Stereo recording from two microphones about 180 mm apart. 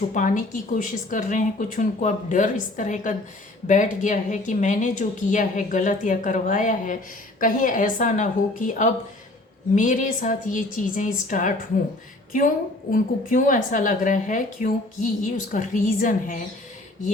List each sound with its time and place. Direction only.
0.1 s a woman's voice: 45° left (ahead or behind)
12.9 s a woman's voice: 45° left (ahead or behind)